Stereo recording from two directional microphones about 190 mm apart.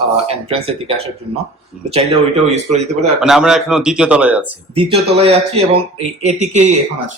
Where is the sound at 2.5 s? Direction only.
35° right (ahead or behind).